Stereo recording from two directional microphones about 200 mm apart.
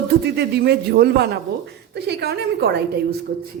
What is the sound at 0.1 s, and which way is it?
A woman's voice, 55° right (ahead or behind).